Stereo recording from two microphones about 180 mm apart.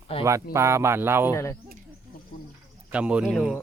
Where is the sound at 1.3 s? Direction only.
15° left (ahead or behind).